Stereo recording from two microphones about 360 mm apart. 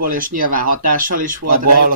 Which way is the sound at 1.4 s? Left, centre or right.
Right.